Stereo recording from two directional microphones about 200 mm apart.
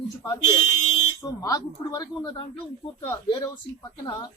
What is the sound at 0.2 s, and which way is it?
Speech, 15° left (ahead or behind).